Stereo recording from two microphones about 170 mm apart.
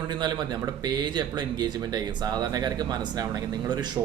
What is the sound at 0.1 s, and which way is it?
Speech, 25° right (ahead or behind).